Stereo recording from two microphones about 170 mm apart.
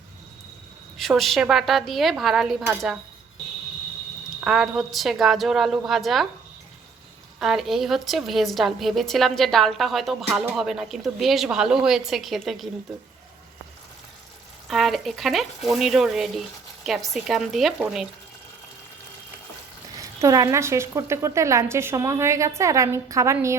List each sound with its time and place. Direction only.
0.9 s a woman's voice: centre (ahead or behind)
4.4 s a woman's voice: 5° right (ahead or behind)
7.3 s a woman's voice: centre (ahead or behind)
14.7 s a woman's voice: centre (ahead or behind)
20.0 s speech: 20° right (ahead or behind)